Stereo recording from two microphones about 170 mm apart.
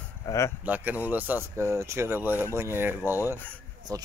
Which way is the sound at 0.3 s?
20° left (ahead or behind).